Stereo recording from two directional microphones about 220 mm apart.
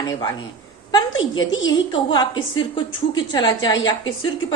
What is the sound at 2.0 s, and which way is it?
Speech, 20° left (ahead or behind).